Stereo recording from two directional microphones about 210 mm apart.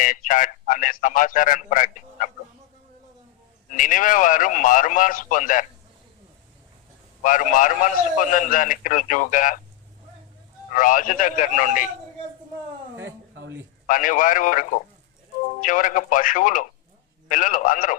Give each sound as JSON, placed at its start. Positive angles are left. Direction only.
{"t": 0.0, "sound": "a man's voice", "side_deg": 40}
{"t": 3.7, "sound": "a man's voice", "side_deg": 40}
{"t": 7.2, "sound": "a man's voice", "side_deg": 40}
{"t": 10.7, "sound": "a man's voice", "side_deg": 40}
{"t": 13.0, "sound": "a sound", "side_deg": -60}
{"t": 13.8, "sound": "a man's voice", "side_deg": 40}